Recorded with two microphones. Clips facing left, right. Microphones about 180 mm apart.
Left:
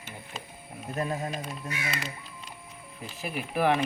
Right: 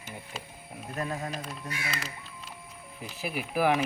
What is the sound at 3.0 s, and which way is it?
Speech, 5° right (ahead or behind).